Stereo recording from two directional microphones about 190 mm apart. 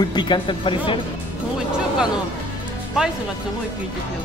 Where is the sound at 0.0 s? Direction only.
25° left (ahead or behind).